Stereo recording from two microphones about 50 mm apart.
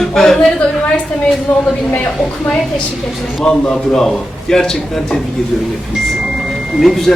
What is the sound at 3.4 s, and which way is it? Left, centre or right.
A man's voice, centre.